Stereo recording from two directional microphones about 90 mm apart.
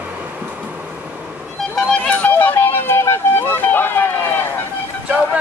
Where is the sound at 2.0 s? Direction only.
20° left (ahead or behind).